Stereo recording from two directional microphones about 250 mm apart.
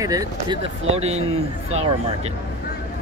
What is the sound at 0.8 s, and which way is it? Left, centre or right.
Speech, right.